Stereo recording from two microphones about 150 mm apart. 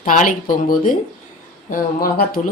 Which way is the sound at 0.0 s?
60° left (ahead or behind).